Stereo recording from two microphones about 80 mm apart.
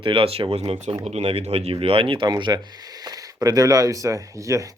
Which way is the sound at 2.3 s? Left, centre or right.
Right.